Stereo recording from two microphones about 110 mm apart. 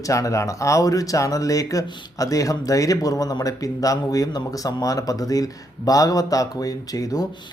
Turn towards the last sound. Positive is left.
turn(degrees=35)  # may be behind; listen again after turning